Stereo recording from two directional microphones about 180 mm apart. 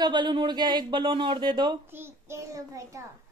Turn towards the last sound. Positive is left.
turn(degrees=-15)  # may be behind; listen again after turning